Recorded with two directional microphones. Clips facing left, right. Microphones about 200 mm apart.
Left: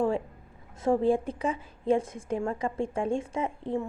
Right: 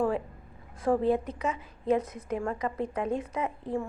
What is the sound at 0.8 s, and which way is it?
A woman's voice, 25° left (ahead or behind).